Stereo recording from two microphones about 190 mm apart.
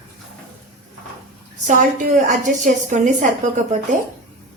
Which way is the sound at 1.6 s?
40° right (ahead or behind).